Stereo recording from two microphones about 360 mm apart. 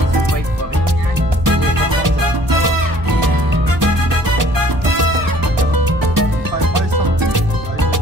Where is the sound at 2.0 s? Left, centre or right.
Right.